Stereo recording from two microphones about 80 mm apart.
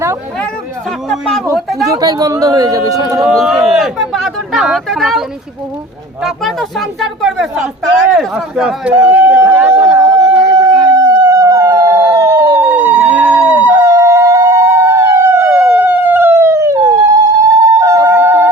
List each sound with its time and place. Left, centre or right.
1.1 s speech: centre
2.0 s speech: right
3.3 s speech: centre
6.2 s speech: centre
8.9 s a sound: right
10.4 s howl: right
13.8 s police car: right
15.4 s police car: right
17.7 s music: right